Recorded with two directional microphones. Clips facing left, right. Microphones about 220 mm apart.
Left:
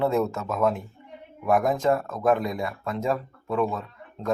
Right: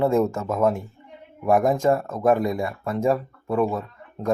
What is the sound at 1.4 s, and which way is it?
Speech, 30° right (ahead or behind).